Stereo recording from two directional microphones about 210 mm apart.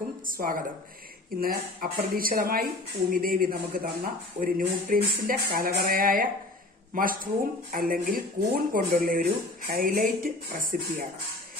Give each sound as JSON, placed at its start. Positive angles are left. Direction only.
{"t": 0.3, "sound": "speech", "side_deg": -40}